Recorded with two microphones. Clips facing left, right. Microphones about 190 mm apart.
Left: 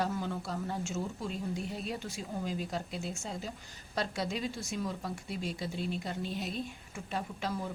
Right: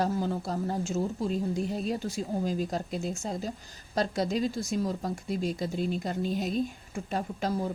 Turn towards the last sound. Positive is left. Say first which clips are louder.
# right 6 dB
turn(degrees=-40)  # may be behind; listen again after turning